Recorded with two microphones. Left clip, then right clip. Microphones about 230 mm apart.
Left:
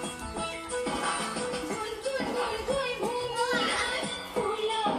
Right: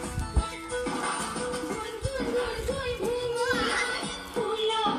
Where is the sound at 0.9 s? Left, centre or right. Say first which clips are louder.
Left 1 dB; right.